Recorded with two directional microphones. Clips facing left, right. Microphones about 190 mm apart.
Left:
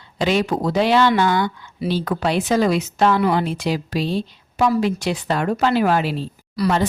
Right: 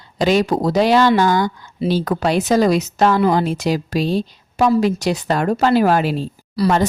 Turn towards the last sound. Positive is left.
turn(degrees=-30)  # may be behind; listen again after turning